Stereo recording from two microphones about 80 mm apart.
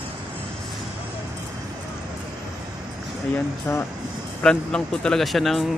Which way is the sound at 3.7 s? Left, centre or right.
Left.